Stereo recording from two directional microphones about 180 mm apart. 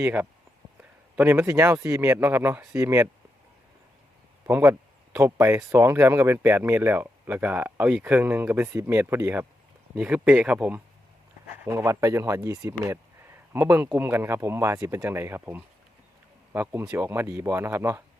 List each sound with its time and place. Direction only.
0.0 s speech: 10° right (ahead or behind)
4.4 s speech: 10° right (ahead or behind)